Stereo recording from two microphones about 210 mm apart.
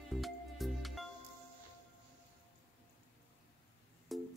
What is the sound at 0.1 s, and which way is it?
Music, centre (ahead or behind).